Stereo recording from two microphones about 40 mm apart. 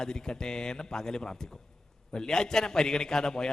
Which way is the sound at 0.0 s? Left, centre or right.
Centre.